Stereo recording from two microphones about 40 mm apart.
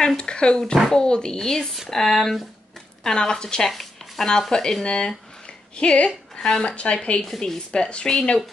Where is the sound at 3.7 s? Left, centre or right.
Centre.